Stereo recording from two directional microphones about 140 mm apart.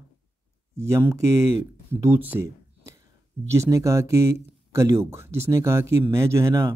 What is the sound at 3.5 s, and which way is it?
Speech, 20° right (ahead or behind).